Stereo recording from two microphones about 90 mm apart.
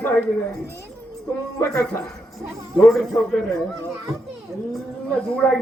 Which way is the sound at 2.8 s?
Centre (ahead or behind).